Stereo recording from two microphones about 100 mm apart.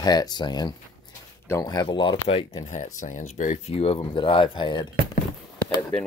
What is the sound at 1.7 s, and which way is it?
Speech, 55° left (ahead or behind).